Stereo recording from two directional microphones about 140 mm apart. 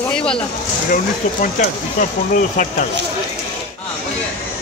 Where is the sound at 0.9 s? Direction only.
70° left (ahead or behind).